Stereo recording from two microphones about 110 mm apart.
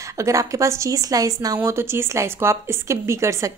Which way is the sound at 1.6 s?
25° right (ahead or behind).